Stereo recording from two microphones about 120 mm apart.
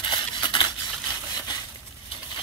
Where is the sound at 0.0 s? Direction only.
40° left (ahead or behind).